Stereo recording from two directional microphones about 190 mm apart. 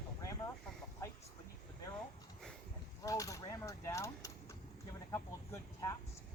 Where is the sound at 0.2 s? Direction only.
15° left (ahead or behind).